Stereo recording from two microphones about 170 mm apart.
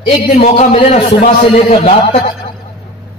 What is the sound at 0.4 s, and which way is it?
A man's voice, 45° left (ahead or behind).